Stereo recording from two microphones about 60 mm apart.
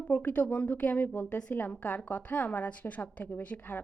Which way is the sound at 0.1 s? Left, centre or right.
Left.